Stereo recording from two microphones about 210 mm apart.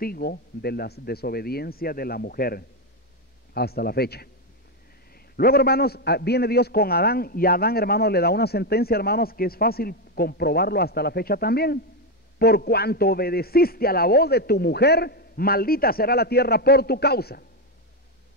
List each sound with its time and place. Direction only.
0.0 s a man's voice: 45° left (ahead or behind)